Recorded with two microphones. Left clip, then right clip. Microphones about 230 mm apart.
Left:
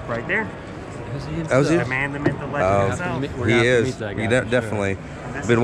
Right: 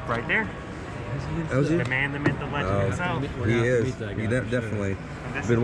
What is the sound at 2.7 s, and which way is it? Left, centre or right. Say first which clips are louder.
Speech: left 9 dB; left.